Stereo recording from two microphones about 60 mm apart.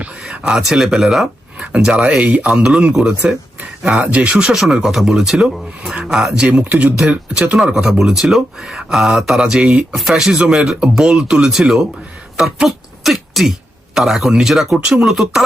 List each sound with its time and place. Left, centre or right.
0.2 s speech: centre
2.6 s speech: centre
4.5 s speech: centre
5.8 s speech: centre
7.5 s speech: centre